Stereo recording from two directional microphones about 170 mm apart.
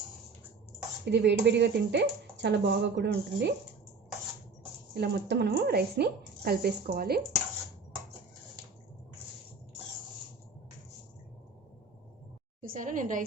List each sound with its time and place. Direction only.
1.0 s speech: 90° right
4.9 s a woman's voice: 80° right; by 7.2 s 65° right (ahead or behind)
12.7 s a woman's voice: 50° right (ahead or behind)